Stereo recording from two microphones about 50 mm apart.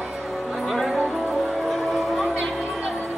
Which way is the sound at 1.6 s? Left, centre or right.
Centre.